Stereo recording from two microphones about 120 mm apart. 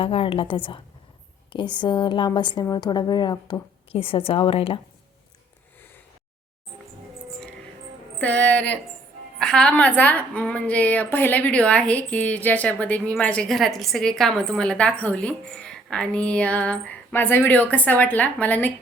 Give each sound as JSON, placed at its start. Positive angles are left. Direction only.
{"t": 0.0, "sound": "a woman's voice", "side_deg": 50}
{"t": 8.2, "sound": "a woman's voice", "side_deg": 10}